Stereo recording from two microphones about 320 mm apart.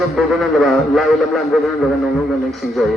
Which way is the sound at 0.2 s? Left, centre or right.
Centre.